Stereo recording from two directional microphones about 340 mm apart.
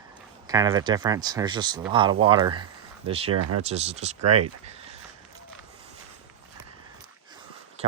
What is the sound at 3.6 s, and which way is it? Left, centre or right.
Speech, centre.